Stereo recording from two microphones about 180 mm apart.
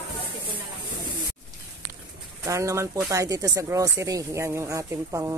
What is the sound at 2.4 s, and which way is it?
Speech, 15° right (ahead or behind).